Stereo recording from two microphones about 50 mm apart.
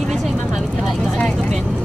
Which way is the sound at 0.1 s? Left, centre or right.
Centre.